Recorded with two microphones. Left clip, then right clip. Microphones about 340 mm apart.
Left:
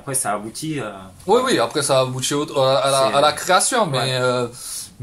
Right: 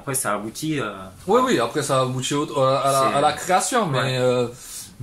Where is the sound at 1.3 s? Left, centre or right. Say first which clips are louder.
Left 2 dB; left.